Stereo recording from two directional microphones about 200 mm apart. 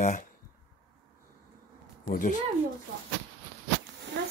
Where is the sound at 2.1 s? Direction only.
40° left (ahead or behind).